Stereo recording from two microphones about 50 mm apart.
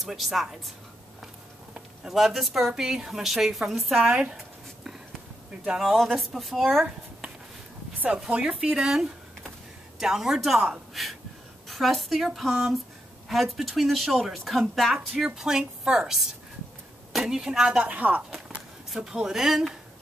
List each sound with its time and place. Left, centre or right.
0.0 s a woman's voice: centre
2.0 s a woman's voice: centre
4.0 s a woman's voice: centre
5.8 s a woman's voice: centre
8.3 s a woman's voice: right
11.6 s a woman's voice: centre
15.3 s a woman's voice: centre
17.8 s speech: right
18.9 s a woman's voice: centre